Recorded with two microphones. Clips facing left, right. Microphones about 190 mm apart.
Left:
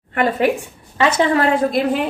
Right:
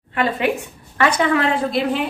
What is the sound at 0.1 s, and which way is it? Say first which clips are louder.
Speech: left 3 dB; 45° left (ahead or behind).